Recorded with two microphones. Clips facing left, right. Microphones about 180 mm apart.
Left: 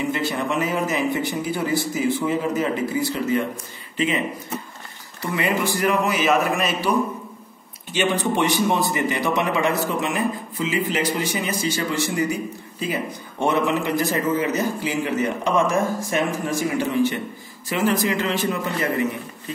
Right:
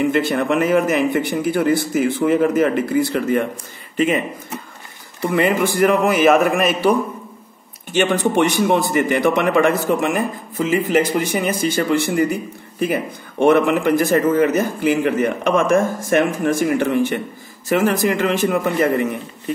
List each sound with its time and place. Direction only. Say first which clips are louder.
0.0 s speech: right 6 dB; 55° right (ahead or behind)
5.2 s speech: right 6 dB; 55° right (ahead or behind)
7.9 s speech: right 5 dB; 50° right (ahead or behind)